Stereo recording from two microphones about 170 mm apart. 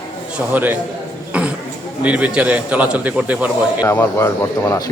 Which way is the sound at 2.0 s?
10° right (ahead or behind).